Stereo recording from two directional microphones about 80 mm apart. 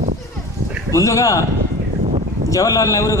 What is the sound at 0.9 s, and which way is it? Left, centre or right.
Speech, left.